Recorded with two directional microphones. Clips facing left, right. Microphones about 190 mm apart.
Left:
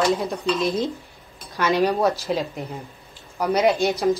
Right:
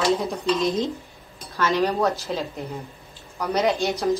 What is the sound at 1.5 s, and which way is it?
A woman's voice, 15° left (ahead or behind).